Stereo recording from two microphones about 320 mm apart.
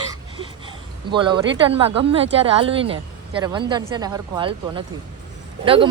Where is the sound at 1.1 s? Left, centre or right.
Centre.